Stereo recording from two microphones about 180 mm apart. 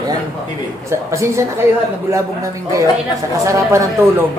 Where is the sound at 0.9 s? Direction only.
15° right (ahead or behind).